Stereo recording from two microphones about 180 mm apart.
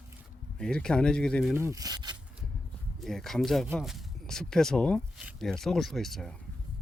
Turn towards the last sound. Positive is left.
turn(degrees=0)  # may be behind; listen again after turning